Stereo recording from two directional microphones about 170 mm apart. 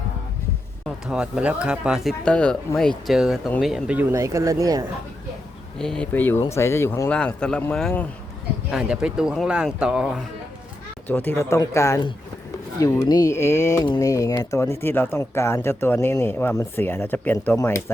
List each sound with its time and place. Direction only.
1.0 s speech: 5° right (ahead or behind)
4.1 s speech: 20° right (ahead or behind)
5.8 s speech: 5° left (ahead or behind)
7.1 s speech: 5° left (ahead or behind)
11.1 s speech: 10° left (ahead or behind)